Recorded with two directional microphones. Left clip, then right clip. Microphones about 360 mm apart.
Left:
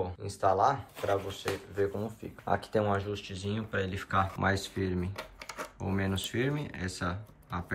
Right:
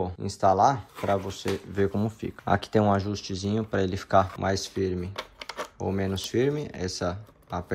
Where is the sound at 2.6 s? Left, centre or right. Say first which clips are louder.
Right 6 dB; centre.